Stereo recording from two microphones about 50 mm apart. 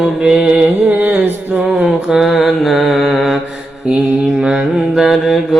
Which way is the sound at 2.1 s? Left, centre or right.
Centre.